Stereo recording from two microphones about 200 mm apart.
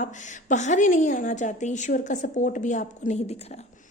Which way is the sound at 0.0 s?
40° left (ahead or behind).